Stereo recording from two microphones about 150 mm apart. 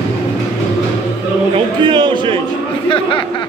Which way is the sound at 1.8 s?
35° right (ahead or behind).